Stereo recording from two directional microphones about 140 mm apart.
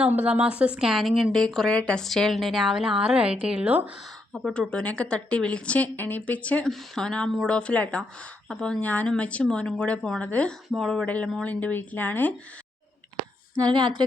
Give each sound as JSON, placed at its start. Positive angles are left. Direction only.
{"t": 0.0, "sound": "a woman's voice", "side_deg": -10}
{"t": 13.6, "sound": "a woman's voice", "side_deg": -30}